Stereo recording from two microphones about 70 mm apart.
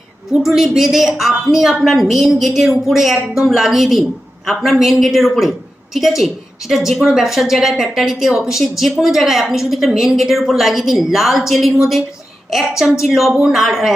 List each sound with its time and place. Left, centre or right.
0.3 s a woman's voice: centre